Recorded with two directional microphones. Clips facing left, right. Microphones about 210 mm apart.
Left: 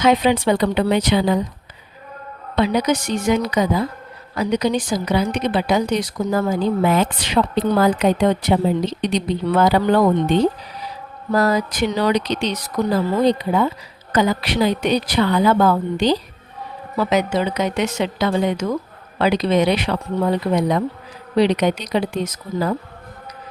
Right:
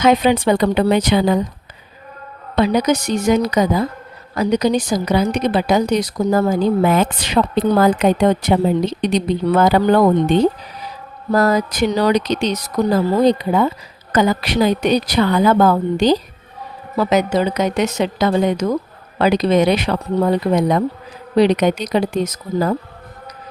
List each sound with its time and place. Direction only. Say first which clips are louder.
0.0 s speech: right 2 dB; 45° right (ahead or behind)
2.6 s a woman's voice: right 3 dB; 45° right (ahead or behind)
11.3 s a woman's voice: right 2 dB; 45° right (ahead or behind)